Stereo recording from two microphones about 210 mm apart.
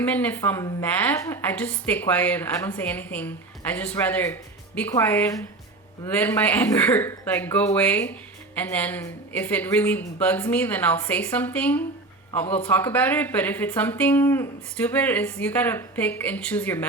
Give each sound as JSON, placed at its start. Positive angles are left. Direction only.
{"t": 0.0, "sound": "a woman's voice", "side_deg": 10}